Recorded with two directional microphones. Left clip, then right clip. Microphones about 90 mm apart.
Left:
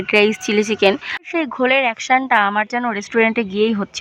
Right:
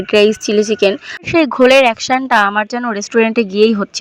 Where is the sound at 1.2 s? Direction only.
70° right (ahead or behind).